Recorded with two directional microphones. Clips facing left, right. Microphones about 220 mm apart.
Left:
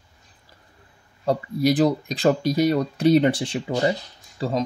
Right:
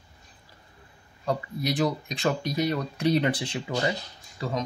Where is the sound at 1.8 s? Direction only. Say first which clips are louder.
Left 6 dB; 35° left (ahead or behind).